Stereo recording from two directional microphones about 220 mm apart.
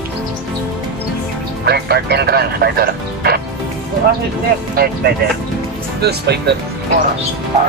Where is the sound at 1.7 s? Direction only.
45° right (ahead or behind).